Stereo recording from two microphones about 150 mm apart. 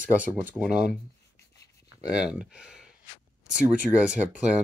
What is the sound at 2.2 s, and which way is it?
Speech, 5° right (ahead or behind).